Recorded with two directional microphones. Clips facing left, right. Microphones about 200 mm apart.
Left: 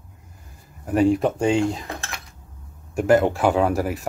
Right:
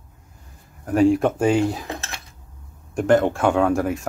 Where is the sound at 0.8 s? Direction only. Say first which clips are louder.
Right 2 dB; centre (ahead or behind).